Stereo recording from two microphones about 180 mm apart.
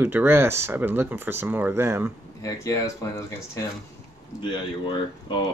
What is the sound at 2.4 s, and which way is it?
Speech, 15° left (ahead or behind).